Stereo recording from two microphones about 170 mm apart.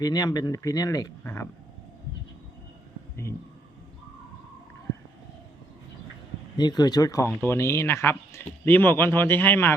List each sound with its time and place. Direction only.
0.0 s speech: 20° left (ahead or behind)
6.6 s speech: 25° left (ahead or behind)